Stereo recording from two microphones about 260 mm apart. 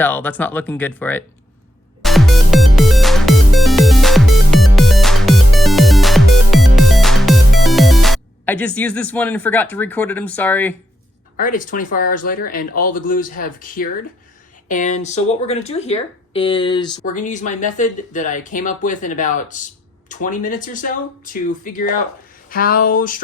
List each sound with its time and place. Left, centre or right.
0.0 s speech: centre
2.0 s music: centre
11.3 s speech: left
17.2 s speech: left